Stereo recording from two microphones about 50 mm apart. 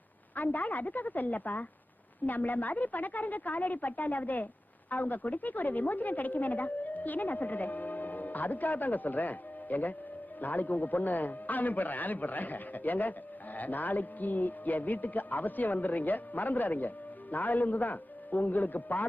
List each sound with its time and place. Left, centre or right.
0.3 s a man's voice: left